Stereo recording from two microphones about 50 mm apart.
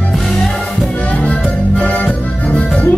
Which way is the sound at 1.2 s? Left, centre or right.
Left.